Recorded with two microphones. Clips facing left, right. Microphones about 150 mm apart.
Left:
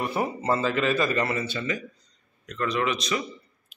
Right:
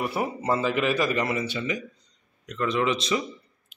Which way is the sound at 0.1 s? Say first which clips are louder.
Even; 10° right (ahead or behind).